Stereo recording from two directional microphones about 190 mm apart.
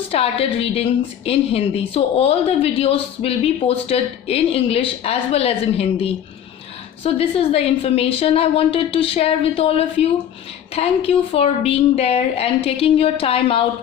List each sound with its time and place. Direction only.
0.1 s a woman's voice: 30° left (ahead or behind)